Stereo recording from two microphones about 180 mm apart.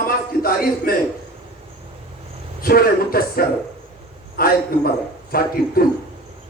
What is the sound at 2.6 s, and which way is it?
A man's voice, 55° left (ahead or behind).